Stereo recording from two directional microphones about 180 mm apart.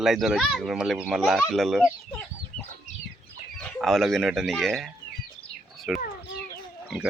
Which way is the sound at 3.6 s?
Centre (ahead or behind).